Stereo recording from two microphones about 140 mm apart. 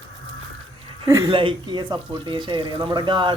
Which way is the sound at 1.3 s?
35° right (ahead or behind).